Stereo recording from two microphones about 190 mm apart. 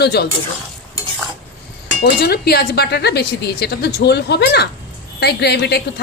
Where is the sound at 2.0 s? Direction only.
55° left (ahead or behind).